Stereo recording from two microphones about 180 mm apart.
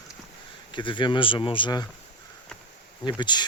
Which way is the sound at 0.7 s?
25° left (ahead or behind).